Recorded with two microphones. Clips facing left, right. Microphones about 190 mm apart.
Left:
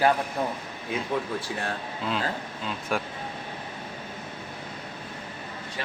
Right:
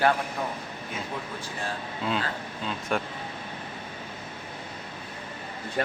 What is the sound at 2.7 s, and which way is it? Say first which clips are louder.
Speech: even; centre (ahead or behind).